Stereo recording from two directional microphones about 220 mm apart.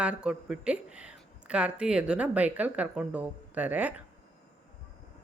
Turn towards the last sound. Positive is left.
turn(degrees=-5)  # may be behind; listen again after turning